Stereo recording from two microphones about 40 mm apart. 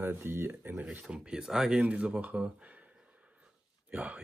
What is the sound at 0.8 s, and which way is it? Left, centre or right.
Speech, right.